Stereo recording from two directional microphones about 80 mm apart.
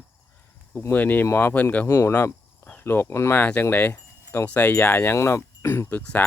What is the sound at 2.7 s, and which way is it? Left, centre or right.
Speech, left.